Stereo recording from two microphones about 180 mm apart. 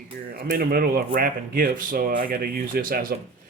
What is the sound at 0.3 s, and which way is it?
Speech, 55° right (ahead or behind).